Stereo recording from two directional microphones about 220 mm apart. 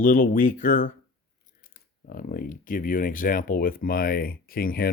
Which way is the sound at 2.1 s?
40° left (ahead or behind).